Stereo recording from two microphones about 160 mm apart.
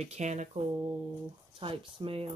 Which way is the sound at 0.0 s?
45° right (ahead or behind).